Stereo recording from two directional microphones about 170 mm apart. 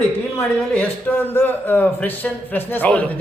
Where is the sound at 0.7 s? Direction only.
10° left (ahead or behind).